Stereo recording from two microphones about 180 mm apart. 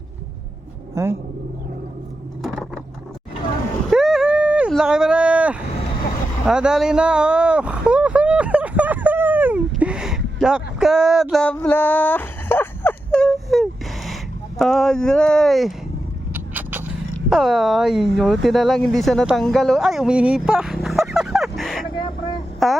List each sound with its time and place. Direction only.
1.0 s speech: 15° right (ahead or behind)
3.8 s a sound: 5° right (ahead or behind)
14.6 s speech: centre (ahead or behind)
16.3 s a sound: 10° right (ahead or behind)
17.2 s speech: centre (ahead or behind)
21.9 s vehicle: 25° left (ahead or behind)
22.6 s speech: centre (ahead or behind)